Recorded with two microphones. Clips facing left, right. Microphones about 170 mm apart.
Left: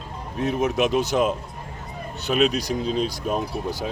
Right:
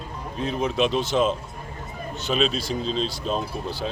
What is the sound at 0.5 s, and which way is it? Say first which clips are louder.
Speech: left 1 dB; 15° left (ahead or behind).